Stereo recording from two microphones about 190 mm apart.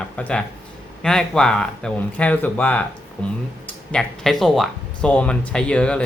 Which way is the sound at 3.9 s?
5° left (ahead or behind).